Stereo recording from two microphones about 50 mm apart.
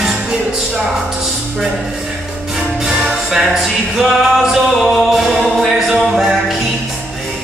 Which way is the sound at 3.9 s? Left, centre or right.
Centre.